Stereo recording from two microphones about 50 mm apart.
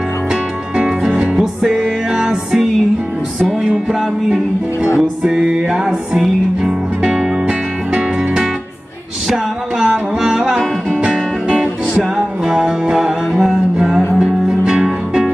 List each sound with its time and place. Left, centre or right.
0.8 s music: centre
5.2 s music: centre
9.8 s music: centre
14.1 s music: centre